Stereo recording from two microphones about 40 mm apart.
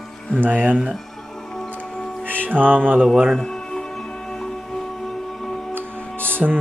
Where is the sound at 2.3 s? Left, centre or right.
Right.